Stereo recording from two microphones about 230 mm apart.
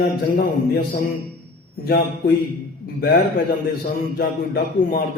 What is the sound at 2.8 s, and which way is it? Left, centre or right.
Music, left.